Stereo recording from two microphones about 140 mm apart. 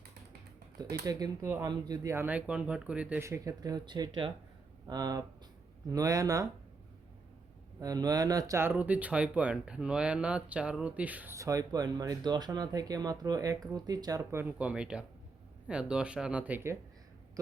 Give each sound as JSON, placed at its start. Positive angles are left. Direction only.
{"t": 0.8, "sound": "speech", "side_deg": -25}
{"t": 3.2, "sound": "speech", "side_deg": -20}
{"t": 7.8, "sound": "speech", "side_deg": -25}
{"t": 11.3, "sound": "speech", "side_deg": -25}
{"t": 14.7, "sound": "speech", "side_deg": -5}